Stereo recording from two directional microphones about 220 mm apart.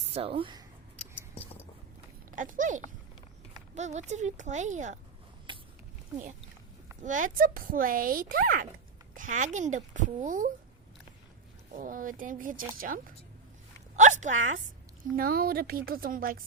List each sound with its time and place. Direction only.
0.1 s speech: 25° right (ahead or behind)
2.3 s speech: 35° right (ahead or behind)
5.5 s a sound: 20° right (ahead or behind)
7.0 s speech: 35° right (ahead or behind)
11.7 s a woman's voice: 40° right (ahead or behind)